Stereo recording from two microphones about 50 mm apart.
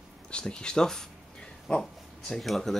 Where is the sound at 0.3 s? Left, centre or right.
Centre.